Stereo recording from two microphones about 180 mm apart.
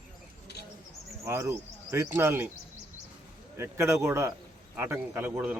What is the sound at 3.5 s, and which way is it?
Speech, 15° right (ahead or behind).